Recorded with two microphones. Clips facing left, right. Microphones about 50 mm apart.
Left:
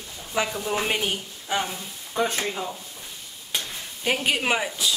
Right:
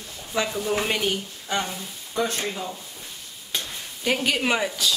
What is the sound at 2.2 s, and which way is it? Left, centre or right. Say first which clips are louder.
Speech: left 1 dB; left.